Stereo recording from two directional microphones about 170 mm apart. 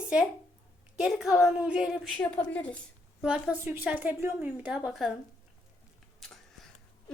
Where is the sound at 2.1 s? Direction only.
5° left (ahead or behind).